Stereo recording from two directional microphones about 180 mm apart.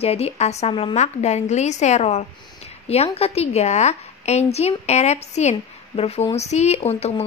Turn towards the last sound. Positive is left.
turn(degrees=35)  # may be behind; listen again after turning